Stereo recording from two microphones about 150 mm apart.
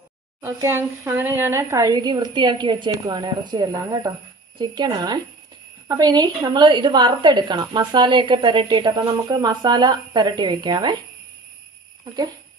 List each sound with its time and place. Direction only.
0.4 s a woman's voice: 20° right (ahead or behind)